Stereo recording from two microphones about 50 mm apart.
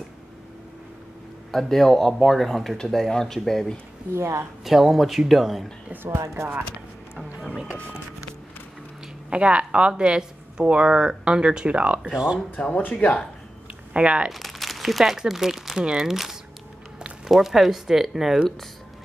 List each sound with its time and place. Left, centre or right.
1.5 s speech: centre
4.1 s a woman's voice: right
4.6 s speech: centre
6.0 s speech: right
9.3 s speech: right
12.6 s speech: left
13.9 s speech: centre
14.3 s speech: centre